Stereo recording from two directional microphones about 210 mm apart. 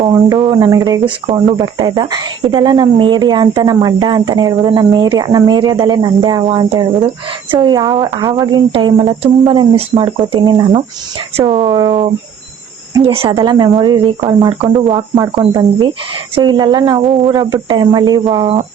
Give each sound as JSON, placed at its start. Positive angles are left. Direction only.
{"t": 0.0, "sound": "speech", "side_deg": -20}
{"t": 16.3, "sound": "speech", "side_deg": -20}